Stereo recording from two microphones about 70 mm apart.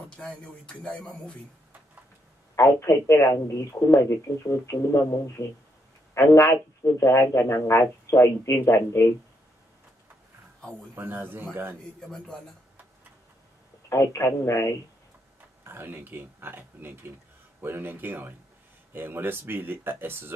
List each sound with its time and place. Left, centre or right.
0.1 s speech: centre
2.5 s a man's voice: left
11.0 s speech: right
13.8 s a man's voice: left
15.6 s speech: right